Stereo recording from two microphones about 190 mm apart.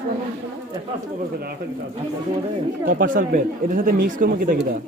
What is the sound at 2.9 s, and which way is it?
Speech, 45° right (ahead or behind).